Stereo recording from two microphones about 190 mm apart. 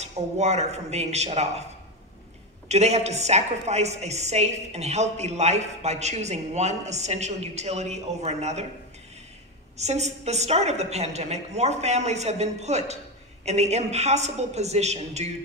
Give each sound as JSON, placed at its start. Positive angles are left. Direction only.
{"t": 0.0, "sound": "a woman's voice", "side_deg": -35}
{"t": 2.7, "sound": "a woman's voice", "side_deg": -35}
{"t": 9.8, "sound": "a woman's voice", "side_deg": -35}